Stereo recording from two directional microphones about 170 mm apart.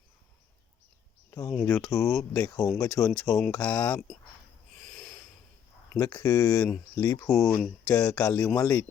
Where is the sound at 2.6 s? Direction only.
Centre (ahead or behind).